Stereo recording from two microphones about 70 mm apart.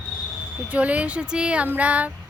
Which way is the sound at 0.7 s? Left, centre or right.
Right.